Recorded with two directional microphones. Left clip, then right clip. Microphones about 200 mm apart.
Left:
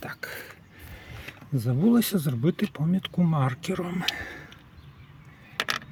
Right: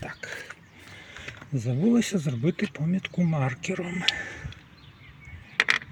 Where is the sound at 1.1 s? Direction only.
20° left (ahead or behind).